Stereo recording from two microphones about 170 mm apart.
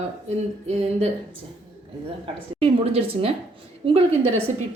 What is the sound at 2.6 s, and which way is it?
A woman's voice, 35° right (ahead or behind).